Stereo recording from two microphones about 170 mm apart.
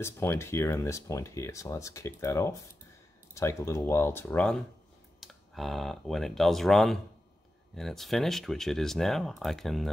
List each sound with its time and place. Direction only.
0.0 s speech: 15° left (ahead or behind)